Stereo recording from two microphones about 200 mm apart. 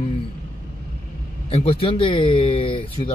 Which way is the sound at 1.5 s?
30° left (ahead or behind).